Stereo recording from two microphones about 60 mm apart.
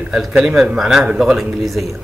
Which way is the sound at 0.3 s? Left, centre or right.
Centre.